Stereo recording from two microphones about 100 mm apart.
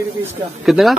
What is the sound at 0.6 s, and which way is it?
Speech, 5° right (ahead or behind).